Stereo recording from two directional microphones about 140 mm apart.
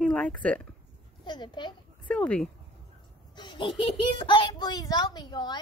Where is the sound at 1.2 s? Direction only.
35° left (ahead or behind).